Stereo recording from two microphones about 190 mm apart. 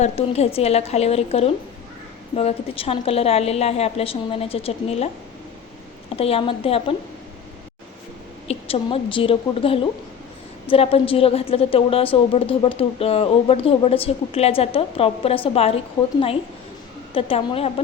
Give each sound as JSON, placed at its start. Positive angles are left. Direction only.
{"t": 0.0, "sound": "a woman's voice", "side_deg": 35}
{"t": 6.1, "sound": "a woman's voice", "side_deg": 30}
{"t": 8.4, "sound": "a woman's voice", "side_deg": 30}
{"t": 17.2, "sound": "speech", "side_deg": 30}